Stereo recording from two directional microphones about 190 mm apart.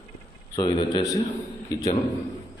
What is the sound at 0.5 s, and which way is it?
Speech, 25° left (ahead or behind).